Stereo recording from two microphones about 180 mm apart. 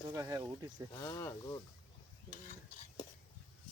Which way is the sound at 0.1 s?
15° right (ahead or behind).